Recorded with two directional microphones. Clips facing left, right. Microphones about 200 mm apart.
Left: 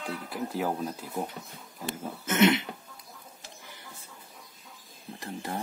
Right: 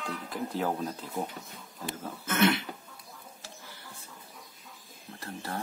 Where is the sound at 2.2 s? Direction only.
20° left (ahead or behind).